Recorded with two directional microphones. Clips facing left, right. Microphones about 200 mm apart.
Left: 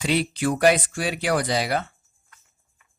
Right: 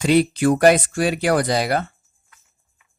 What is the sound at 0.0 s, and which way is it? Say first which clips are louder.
Speech: right 7 dB; 45° right (ahead or behind).